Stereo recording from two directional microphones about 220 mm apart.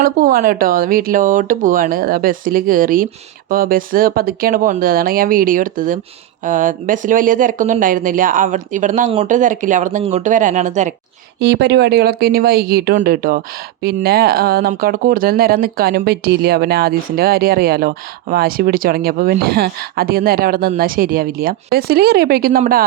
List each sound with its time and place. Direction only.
0.0 s speech: 40° right (ahead or behind)
11.3 s speech: 50° right (ahead or behind)